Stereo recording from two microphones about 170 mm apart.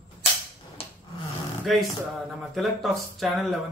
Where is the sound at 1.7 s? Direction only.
Centre (ahead or behind).